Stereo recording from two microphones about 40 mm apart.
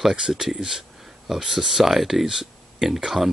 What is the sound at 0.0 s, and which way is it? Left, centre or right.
Speech, centre.